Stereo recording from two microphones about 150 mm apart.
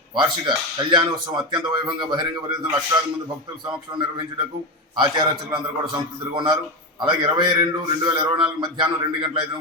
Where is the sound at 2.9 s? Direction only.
15° right (ahead or behind).